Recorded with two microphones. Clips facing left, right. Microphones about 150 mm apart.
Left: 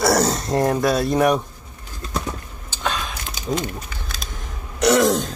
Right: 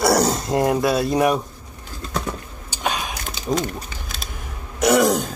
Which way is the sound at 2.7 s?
15° right (ahead or behind).